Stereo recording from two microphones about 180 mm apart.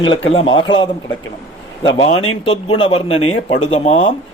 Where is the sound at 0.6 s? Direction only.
90° left.